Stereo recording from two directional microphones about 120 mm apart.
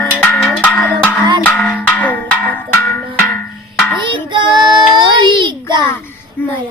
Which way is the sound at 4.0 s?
40° right (ahead or behind).